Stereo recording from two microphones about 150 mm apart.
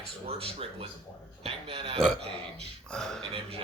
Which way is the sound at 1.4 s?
40° right (ahead or behind).